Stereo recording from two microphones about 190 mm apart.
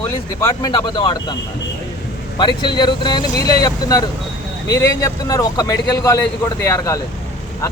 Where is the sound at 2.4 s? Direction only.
25° left (ahead or behind).